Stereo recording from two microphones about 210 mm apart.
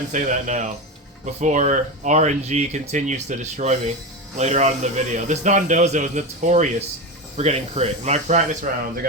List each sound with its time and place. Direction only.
0.1 s speech: 35° right (ahead or behind)